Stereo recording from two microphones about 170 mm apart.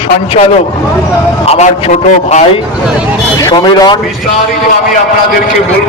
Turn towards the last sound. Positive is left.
turn(degrees=25)  # may be behind; listen again after turning